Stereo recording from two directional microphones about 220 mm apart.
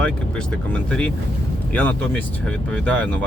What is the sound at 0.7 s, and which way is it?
Speech, 5° left (ahead or behind).